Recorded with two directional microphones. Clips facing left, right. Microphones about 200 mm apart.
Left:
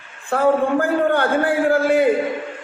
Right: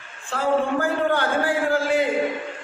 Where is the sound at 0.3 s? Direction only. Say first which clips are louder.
Left 5 dB; 55° left (ahead or behind).